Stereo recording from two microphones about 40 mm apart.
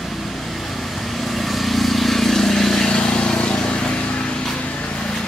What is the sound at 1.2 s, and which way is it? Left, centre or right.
Vehicle, centre.